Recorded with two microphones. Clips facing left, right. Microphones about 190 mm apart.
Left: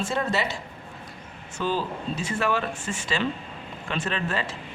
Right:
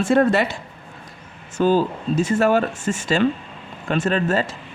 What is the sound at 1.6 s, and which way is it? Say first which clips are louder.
Speech: right 10 dB; 45° right (ahead or behind).